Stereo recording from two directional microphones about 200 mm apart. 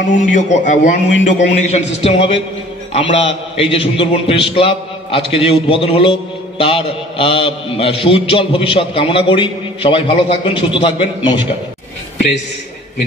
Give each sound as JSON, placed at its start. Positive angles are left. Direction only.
{"t": 0.1, "sound": "a man's voice", "side_deg": 35}